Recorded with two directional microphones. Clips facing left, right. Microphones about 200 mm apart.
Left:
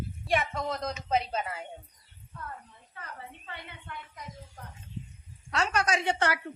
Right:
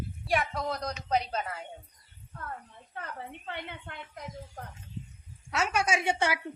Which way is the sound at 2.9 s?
60° right (ahead or behind).